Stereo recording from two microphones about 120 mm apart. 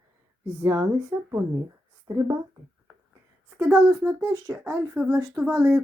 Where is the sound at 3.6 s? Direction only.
15° right (ahead or behind).